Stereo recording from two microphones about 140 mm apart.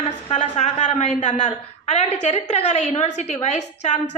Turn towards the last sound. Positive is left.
turn(degrees=55)  # may be behind; listen again after turning